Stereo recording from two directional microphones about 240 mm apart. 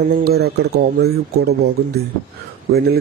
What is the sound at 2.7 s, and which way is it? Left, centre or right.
Speech, right.